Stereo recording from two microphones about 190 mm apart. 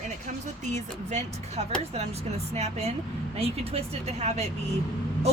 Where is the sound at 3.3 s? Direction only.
30° right (ahead or behind).